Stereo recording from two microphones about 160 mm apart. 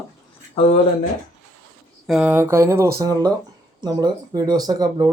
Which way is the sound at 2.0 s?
5° right (ahead or behind).